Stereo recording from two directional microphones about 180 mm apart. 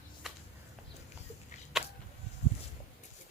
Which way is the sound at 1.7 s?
Centre (ahead or behind).